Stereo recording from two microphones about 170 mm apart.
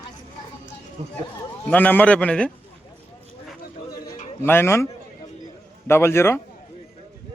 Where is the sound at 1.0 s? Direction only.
40° right (ahead or behind).